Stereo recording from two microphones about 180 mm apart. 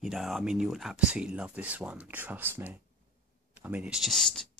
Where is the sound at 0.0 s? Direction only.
Centre (ahead or behind).